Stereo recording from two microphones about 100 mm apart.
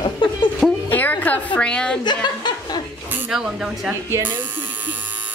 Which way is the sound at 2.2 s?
45° left (ahead or behind).